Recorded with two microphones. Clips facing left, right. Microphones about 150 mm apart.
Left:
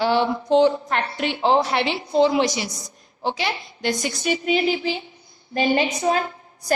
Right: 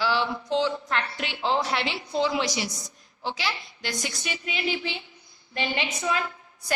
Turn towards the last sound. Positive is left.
turn(degrees=40)  # may be behind; listen again after turning